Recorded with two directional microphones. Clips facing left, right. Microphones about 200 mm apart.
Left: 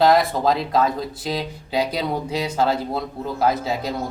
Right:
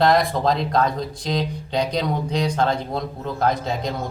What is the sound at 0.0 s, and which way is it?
A man's voice, centre (ahead or behind).